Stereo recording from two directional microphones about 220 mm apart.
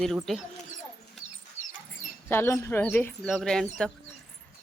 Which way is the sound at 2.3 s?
10° left (ahead or behind).